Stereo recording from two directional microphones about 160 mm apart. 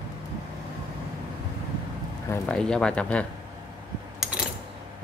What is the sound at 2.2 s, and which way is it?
Speech, 5° left (ahead or behind).